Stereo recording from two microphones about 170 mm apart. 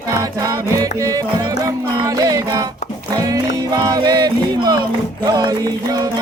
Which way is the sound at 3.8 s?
25° right (ahead or behind).